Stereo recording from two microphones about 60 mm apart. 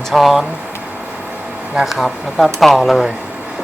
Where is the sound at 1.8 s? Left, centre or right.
Centre.